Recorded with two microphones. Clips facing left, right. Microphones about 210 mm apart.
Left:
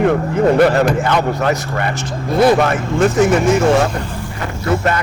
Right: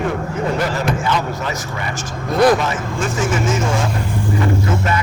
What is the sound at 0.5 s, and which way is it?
Speech, 60° left (ahead or behind).